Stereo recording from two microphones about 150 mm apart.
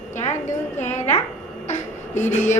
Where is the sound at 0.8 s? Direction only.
50° left (ahead or behind).